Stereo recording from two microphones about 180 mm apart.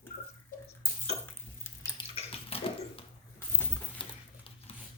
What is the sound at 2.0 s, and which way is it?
Bathtub, 30° left (ahead or behind).